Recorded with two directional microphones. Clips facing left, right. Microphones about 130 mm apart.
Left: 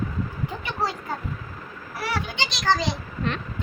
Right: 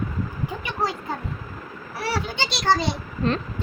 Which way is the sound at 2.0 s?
30° right (ahead or behind).